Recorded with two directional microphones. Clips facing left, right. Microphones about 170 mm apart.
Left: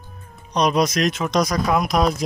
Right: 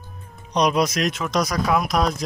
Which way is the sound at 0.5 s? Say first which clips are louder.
Left 1 dB; 10° right (ahead or behind).